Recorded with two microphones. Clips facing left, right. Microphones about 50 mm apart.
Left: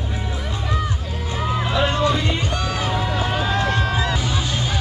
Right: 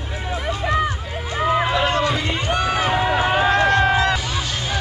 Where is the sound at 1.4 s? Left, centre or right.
Right.